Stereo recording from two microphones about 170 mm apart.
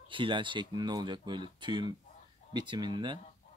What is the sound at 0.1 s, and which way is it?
Speech, 30° right (ahead or behind).